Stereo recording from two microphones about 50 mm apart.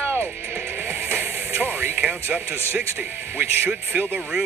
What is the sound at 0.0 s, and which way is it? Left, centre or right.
Music, right.